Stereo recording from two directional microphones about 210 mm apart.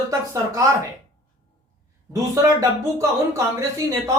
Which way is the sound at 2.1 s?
15° right (ahead or behind).